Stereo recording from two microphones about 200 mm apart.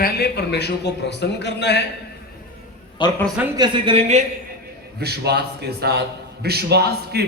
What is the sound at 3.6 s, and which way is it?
Speech, 25° right (ahead or behind).